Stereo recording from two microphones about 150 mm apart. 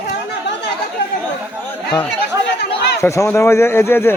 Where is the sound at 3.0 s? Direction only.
20° left (ahead or behind).